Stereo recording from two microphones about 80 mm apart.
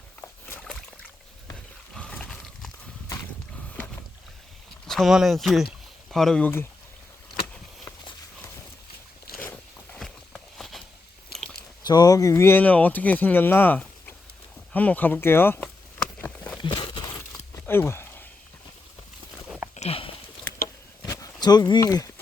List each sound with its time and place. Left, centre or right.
0.2 s rowboat: left
0.6 s rowboat: centre
1.9 s horse: centre
4.9 s speech: centre
6.4 s speech: left
9.9 s walk: centre
11.3 s chewing: centre
11.9 s speech: left
12.3 s speech: left
12.6 s speech: centre
16.2 s a sound: centre
16.6 s a sound: left
17.7 s a sound: left
21.1 s a sound: left